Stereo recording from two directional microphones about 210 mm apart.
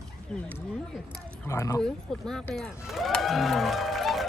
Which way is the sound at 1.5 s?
15° left (ahead or behind).